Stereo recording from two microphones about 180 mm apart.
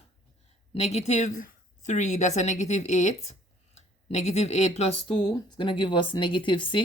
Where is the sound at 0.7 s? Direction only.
35° left (ahead or behind).